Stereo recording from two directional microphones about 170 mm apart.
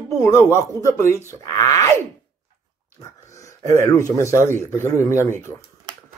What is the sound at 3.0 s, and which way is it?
Speech, 20° left (ahead or behind).